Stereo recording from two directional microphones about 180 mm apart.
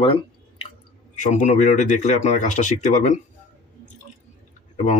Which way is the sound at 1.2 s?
45° left (ahead or behind).